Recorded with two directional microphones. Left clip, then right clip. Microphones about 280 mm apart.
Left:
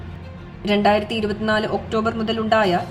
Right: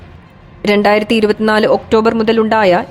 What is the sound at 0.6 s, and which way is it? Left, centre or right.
Speech, right.